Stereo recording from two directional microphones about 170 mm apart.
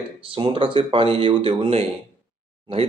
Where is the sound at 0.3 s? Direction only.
30° right (ahead or behind).